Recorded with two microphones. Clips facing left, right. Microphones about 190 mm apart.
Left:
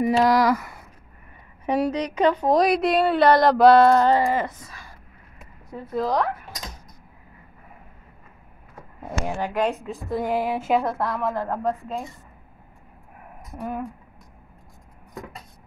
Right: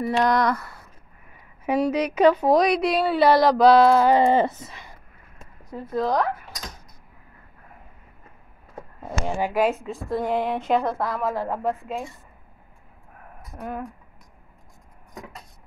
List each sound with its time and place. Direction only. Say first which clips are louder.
0.2 s a woman's voice: even; 5° left (ahead or behind)
1.7 s a woman's voice: right 1 dB; 5° right (ahead or behind)
4.2 s speech: right 4 dB; 25° right (ahead or behind)
5.9 s a woman's voice: even; centre (ahead or behind)
9.4 s a woman's voice: right 3 dB; 5° right (ahead or behind)
13.6 s a woman's voice: left 2 dB; centre (ahead or behind)